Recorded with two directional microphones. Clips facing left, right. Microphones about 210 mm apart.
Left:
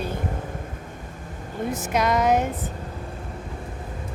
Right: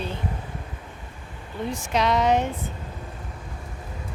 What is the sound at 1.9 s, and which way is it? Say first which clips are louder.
Speech: even; 5° left (ahead or behind).